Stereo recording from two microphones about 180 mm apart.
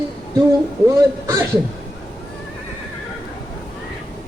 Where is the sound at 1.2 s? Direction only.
15° right (ahead or behind).